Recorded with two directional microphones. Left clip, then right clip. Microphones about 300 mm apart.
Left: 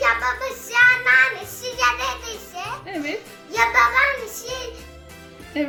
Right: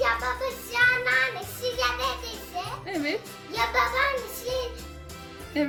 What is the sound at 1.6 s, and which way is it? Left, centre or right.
Music, centre.